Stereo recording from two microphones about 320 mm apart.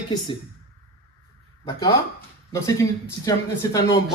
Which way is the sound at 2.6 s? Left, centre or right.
Centre.